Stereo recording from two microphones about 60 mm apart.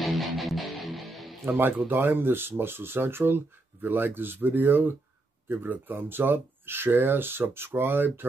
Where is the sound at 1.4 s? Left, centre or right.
Right.